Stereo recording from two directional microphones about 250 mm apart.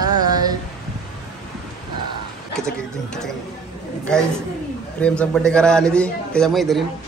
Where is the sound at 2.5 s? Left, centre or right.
Centre.